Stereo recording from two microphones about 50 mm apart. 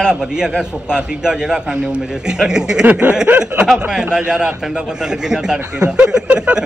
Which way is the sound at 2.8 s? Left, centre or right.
Right.